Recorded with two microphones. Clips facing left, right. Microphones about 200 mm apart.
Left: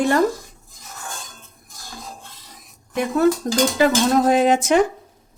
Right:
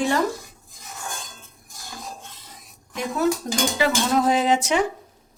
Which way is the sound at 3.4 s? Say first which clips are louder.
Left 5 dB; 50° left (ahead or behind).